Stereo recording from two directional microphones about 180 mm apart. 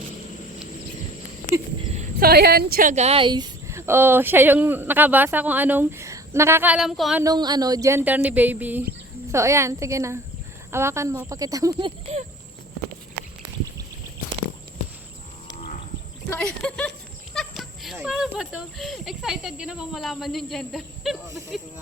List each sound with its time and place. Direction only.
2.0 s a woman's voice: 55° right (ahead or behind)
2.9 s speech: 35° right (ahead or behind); by 7.2 s centre (ahead or behind)
7.2 s speech: 20° right (ahead or behind)
13.2 s a sound: 65° right (ahead or behind)
16.3 s speech: 5° left (ahead or behind)
17.3 s goat: centre (ahead or behind)
17.9 s speech: 5° right (ahead or behind)